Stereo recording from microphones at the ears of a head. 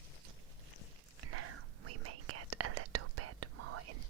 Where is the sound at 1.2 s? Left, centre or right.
Right.